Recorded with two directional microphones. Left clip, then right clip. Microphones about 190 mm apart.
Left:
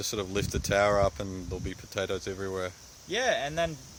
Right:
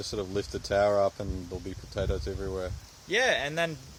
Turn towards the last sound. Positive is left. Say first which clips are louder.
# right 1 dB
turn(degrees=-35)  # may be behind; listen again after turning